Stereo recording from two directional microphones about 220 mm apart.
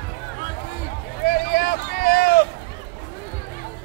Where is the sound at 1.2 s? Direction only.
45° left (ahead or behind).